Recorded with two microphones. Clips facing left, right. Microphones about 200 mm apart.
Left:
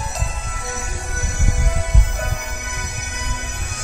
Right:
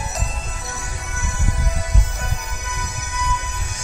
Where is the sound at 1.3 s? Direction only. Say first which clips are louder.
Left 1 dB; 75° left (ahead or behind).